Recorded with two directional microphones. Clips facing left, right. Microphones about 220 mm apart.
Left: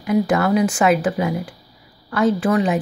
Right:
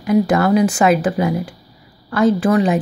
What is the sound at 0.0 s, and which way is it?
Speech, 40° right (ahead or behind).